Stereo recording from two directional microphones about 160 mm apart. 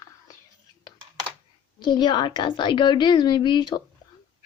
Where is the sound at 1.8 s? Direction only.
30° left (ahead or behind).